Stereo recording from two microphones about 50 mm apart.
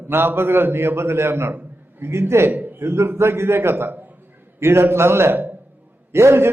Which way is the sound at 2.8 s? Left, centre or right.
Right.